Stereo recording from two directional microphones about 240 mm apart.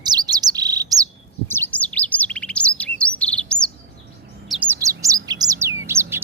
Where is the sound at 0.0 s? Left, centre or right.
Centre.